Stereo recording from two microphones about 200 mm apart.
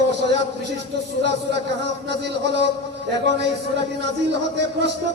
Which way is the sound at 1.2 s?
60° right (ahead or behind).